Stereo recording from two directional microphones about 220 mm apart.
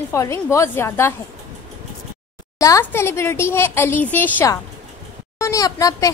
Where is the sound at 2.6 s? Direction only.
15° left (ahead or behind).